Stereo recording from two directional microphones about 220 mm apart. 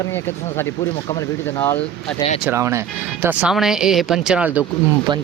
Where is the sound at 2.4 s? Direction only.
10° right (ahead or behind).